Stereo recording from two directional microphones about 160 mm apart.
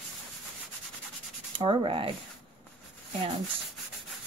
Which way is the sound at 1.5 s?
30° right (ahead or behind).